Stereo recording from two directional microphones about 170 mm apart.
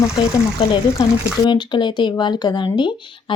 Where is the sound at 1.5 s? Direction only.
25° left (ahead or behind).